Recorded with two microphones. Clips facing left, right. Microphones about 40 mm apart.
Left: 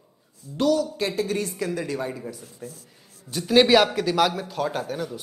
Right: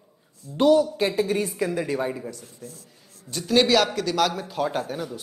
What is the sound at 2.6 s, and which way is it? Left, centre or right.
Speech, left.